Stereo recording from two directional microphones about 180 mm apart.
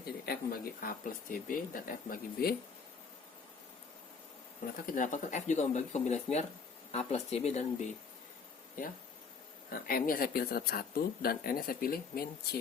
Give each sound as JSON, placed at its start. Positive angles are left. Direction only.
{"t": 0.0, "sound": "speech", "side_deg": 55}
{"t": 4.6, "sound": "speech", "side_deg": 50}
{"t": 8.8, "sound": "speech", "side_deg": 50}